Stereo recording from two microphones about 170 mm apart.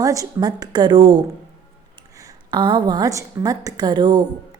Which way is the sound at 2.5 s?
25° right (ahead or behind).